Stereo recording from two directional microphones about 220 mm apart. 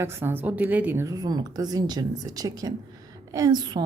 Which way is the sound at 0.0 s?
10° right (ahead or behind).